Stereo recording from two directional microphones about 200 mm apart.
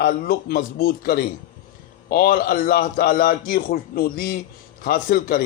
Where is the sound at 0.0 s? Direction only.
50° left (ahead or behind).